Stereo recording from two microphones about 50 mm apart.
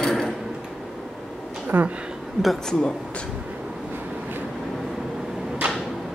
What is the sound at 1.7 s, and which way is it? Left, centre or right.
Speech, right.